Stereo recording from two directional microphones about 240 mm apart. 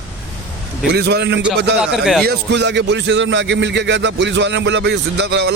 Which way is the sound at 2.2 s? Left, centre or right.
Right.